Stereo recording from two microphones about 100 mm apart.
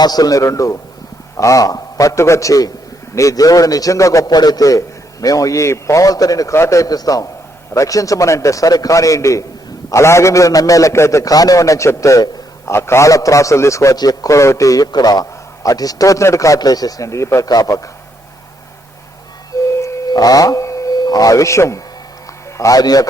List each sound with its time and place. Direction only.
0.0 s a man's voice: 40° left (ahead or behind)
19.8 s a sound: 40° left (ahead or behind)
22.5 s a man's voice: 35° left (ahead or behind)